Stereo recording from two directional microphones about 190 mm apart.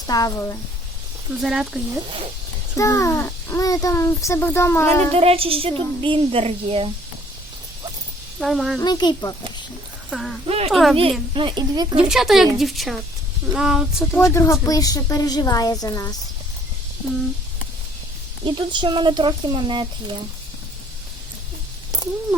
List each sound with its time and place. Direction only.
0.1 s a woman's voice: 20° left (ahead or behind)
1.4 s speech: centre (ahead or behind)
2.0 s speech: 30° right (ahead or behind)
2.7 s speech: 15° left (ahead or behind)
5.1 s a woman's voice: 30° right (ahead or behind)
8.4 s speech: centre (ahead or behind)
8.8 s a woman's voice: 20° left (ahead or behind)
10.1 s speech: centre (ahead or behind)
10.4 s speech: 30° right (ahead or behind)
10.7 s speech: centre (ahead or behind)
11.3 s a woman's voice: 25° right (ahead or behind)
12.0 s speech: centre (ahead or behind)
14.3 s a woman's voice: 15° left (ahead or behind)
18.4 s a woman's voice: 25° right (ahead or behind)